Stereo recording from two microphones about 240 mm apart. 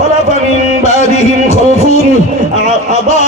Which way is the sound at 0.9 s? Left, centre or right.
Left.